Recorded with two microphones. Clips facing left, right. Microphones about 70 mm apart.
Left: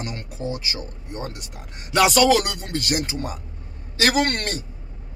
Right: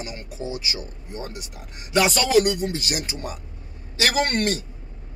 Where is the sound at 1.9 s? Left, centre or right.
Left.